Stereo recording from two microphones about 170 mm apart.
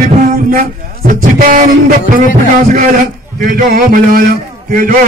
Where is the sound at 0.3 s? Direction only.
55° right (ahead or behind).